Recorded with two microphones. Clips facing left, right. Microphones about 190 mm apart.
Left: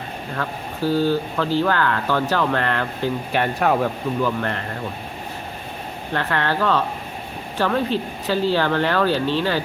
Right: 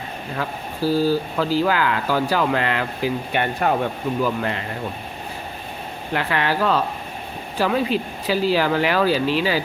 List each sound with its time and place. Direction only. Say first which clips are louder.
0.3 s speech: even; 10° right (ahead or behind)
4.2 s speech: even; 10° right (ahead or behind)
6.1 s speech: even; 10° right (ahead or behind)